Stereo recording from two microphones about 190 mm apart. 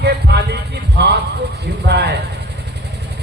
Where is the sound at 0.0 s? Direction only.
60° right (ahead or behind).